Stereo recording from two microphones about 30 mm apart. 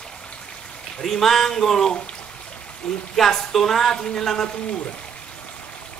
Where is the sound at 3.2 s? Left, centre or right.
Centre.